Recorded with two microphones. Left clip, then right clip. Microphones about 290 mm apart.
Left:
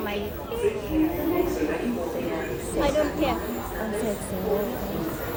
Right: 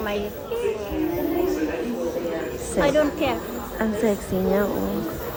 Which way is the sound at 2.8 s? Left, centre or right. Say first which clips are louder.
Right 4 dB; right.